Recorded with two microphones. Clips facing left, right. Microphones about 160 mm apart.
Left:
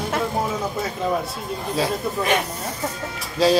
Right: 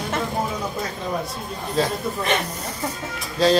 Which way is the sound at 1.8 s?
10° left (ahead or behind).